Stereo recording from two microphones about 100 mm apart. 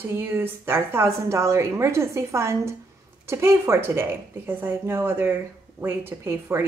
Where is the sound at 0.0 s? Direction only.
20° right (ahead or behind).